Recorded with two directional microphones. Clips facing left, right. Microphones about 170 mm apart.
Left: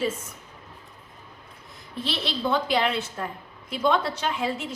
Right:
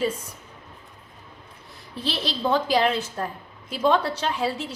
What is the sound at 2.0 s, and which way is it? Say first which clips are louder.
A woman's voice: right 2 dB; 35° right (ahead or behind).